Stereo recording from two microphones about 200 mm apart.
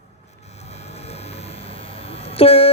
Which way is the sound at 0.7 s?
30° left (ahead or behind).